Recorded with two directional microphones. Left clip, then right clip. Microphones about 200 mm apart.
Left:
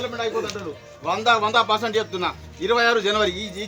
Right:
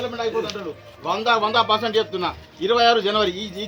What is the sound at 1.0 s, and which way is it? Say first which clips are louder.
A man's voice: even; 20° left (ahead or behind).